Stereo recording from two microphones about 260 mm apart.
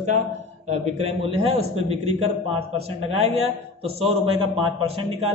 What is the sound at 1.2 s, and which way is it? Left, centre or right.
Speech, right.